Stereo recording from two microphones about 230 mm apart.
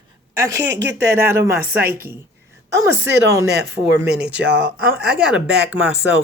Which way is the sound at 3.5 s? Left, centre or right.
Right.